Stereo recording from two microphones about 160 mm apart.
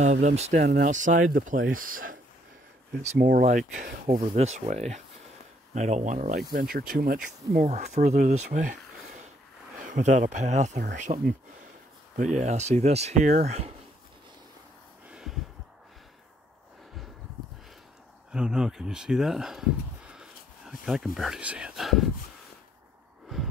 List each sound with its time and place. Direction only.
0.0 s speech: 45° right (ahead or behind)
6.5 s speech: 60° right (ahead or behind)
7.6 s speech: 45° right (ahead or behind)
9.8 s speech: 50° right (ahead or behind)
15.0 s a sound: 5° right (ahead or behind)
18.3 s speech: 5° right (ahead or behind)